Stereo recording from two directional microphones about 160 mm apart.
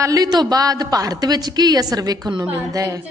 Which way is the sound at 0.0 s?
25° right (ahead or behind).